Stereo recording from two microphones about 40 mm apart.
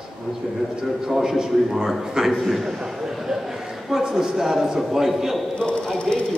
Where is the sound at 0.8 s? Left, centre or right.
Centre.